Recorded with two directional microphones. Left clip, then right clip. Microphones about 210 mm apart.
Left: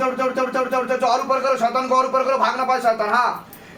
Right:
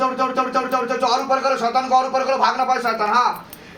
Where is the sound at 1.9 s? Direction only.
35° left (ahead or behind).